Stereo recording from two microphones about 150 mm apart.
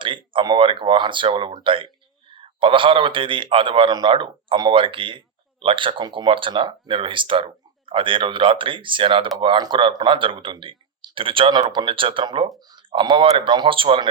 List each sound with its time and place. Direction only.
0.3 s a man's voice: 30° right (ahead or behind)